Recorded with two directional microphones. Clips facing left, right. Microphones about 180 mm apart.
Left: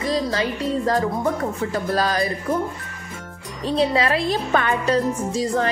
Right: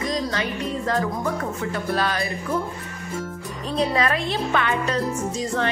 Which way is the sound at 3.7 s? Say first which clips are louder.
Left 3 dB; 30° left (ahead or behind).